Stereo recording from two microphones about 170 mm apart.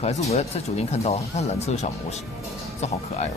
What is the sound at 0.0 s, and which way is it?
Speech, 40° left (ahead or behind).